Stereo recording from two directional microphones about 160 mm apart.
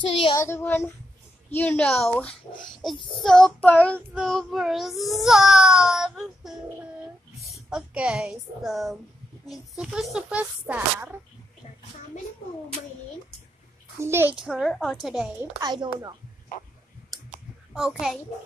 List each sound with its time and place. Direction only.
0.4 s speech: 15° left (ahead or behind)
3.2 s child singing: 5° left (ahead or behind)
7.4 s a woman's voice: centre (ahead or behind)
9.5 s child singing: centre (ahead or behind)
13.9 s a child's voice: 15° right (ahead or behind)
14.3 s child singing: 5° right (ahead or behind)
15.6 s speech: 25° right (ahead or behind)
17.7 s child singing: 5° right (ahead or behind)